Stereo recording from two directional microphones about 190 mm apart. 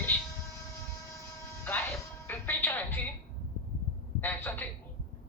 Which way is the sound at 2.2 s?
10° left (ahead or behind).